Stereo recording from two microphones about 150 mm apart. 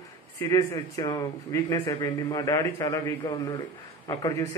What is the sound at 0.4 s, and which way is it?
A man's voice, 20° left (ahead or behind).